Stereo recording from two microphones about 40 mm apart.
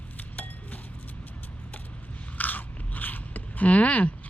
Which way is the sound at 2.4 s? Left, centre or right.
Left.